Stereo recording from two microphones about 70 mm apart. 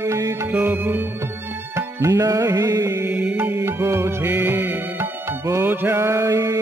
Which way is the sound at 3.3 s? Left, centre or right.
Right.